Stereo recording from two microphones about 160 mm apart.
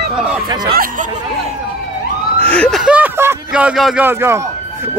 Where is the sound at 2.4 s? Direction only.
10° left (ahead or behind).